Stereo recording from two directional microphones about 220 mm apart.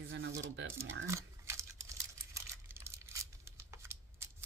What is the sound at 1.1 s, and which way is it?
Typing, 10° right (ahead or behind).